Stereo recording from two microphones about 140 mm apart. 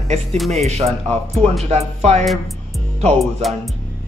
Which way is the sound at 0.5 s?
50° right (ahead or behind).